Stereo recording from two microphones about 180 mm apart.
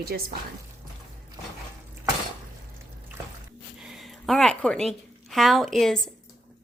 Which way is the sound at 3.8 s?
Centre (ahead or behind).